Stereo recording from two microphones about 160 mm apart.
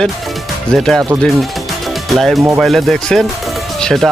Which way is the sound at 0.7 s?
Centre (ahead or behind).